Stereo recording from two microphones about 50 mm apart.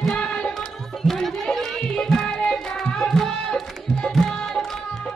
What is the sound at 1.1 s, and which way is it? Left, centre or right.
Chatter, centre.